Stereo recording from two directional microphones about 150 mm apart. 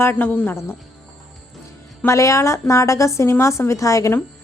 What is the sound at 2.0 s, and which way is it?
Speech, 20° left (ahead or behind).